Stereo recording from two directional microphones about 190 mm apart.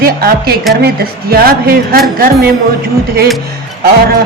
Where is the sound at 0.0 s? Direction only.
50° right (ahead or behind).